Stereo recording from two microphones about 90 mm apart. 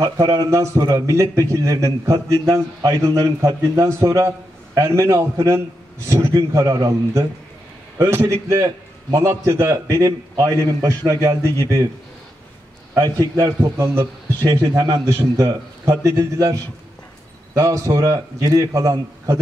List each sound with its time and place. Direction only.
0.0 s a man's voice: 45° right (ahead or behind)
8.0 s a man's voice: 30° right (ahead or behind)
12.9 s a man's voice: 40° right (ahead or behind)
17.6 s a man's voice: 40° right (ahead or behind)